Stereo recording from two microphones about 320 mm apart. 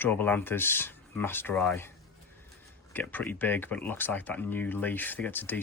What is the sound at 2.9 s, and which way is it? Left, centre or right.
Speech, centre.